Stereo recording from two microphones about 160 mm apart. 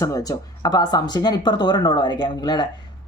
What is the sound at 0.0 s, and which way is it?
Speech, 20° left (ahead or behind).